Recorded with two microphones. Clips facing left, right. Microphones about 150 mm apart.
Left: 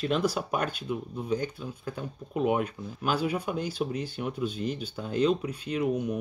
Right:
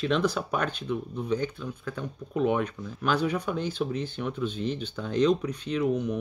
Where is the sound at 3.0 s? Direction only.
10° left (ahead or behind).